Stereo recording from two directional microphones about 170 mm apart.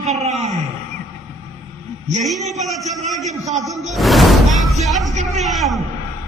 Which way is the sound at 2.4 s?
Centre (ahead or behind).